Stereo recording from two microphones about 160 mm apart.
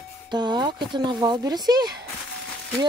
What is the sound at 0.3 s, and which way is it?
Speech, 25° right (ahead or behind).